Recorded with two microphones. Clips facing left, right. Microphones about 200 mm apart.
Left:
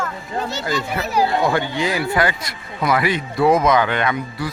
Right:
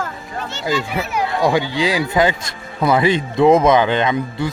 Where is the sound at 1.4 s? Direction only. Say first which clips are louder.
Right 3 dB; 15° right (ahead or behind).